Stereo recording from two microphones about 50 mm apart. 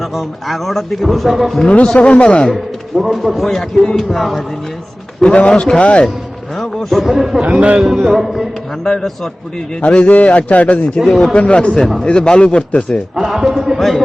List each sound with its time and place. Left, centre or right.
0.0 s a man's voice: centre
1.6 s a man's voice: left
2.5 s a man's voice: centre
5.2 s a man's voice: centre
6.6 s a man's voice: centre
7.4 s a man's voice: right
7.9 s a man's voice: centre
8.8 s speech: centre
9.8 s a man's voice: left
11.0 s a man's voice: centre
11.3 s a man's voice: left
13.1 s a man's voice: centre